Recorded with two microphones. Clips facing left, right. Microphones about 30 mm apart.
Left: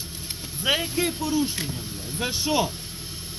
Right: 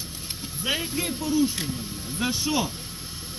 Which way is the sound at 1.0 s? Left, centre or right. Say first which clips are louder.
Even; left.